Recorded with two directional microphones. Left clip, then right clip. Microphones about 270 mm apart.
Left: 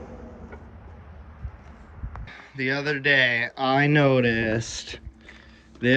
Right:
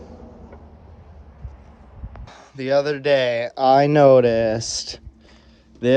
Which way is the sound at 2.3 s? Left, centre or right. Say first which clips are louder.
Right 5 dB; centre.